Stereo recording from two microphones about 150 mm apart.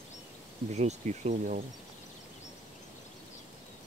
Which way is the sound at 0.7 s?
50° right (ahead or behind).